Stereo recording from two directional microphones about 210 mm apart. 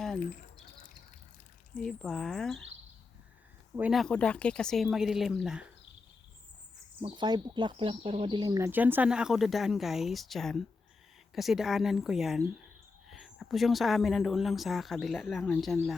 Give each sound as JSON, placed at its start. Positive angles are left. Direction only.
{"t": 0.2, "sound": "rodents", "side_deg": 40}
{"t": 1.7, "sound": "speech", "side_deg": 5}
{"t": 3.8, "sound": "speech", "side_deg": -5}
{"t": 7.0, "sound": "speech", "side_deg": -20}